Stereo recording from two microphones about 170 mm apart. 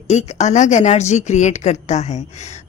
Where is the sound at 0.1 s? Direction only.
40° left (ahead or behind).